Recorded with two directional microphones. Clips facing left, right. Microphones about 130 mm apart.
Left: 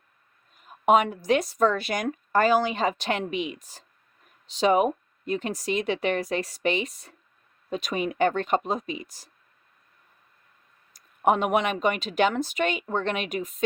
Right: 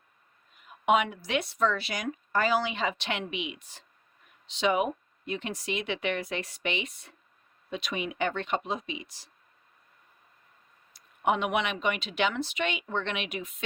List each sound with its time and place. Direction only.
0.5 s speech: 40° left (ahead or behind)
10.9 s speech: 45° left (ahead or behind)